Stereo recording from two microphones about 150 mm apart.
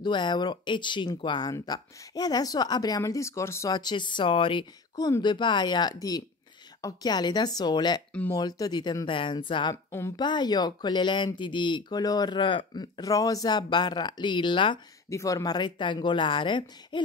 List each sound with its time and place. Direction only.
0.0 s speech: 30° left (ahead or behind)
9.8 s a woman's voice: 15° left (ahead or behind)
10.1 s speech: 30° left (ahead or behind)
15.0 s speech: 20° left (ahead or behind)